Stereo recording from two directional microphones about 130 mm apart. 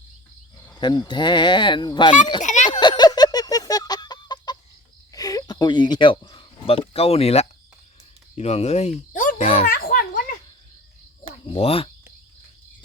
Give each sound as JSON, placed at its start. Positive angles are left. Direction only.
{"t": 0.8, "sound": "speech", "side_deg": 35}
{"t": 2.4, "sound": "a child's voice", "side_deg": 65}
{"t": 2.6, "sound": "chicken", "side_deg": 35}
{"t": 5.1, "sound": "speech", "side_deg": 30}
{"t": 9.4, "sound": "speech", "side_deg": 50}
{"t": 9.6, "sound": "a sound", "side_deg": 90}
{"t": 11.5, "sound": "speech", "side_deg": 45}